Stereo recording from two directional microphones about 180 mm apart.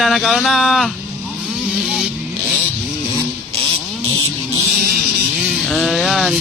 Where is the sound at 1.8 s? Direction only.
5° right (ahead or behind).